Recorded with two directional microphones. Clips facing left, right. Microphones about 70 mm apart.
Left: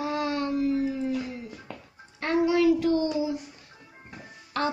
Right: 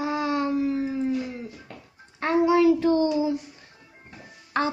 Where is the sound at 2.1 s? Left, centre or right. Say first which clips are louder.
Right 3 dB; right.